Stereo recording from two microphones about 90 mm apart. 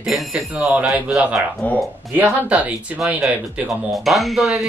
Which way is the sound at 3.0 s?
Centre (ahead or behind).